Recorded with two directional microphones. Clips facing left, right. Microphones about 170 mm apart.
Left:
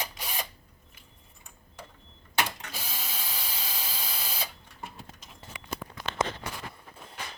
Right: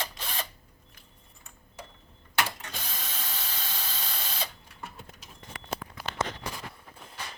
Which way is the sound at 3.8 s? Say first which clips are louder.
Even; 10° left (ahead or behind).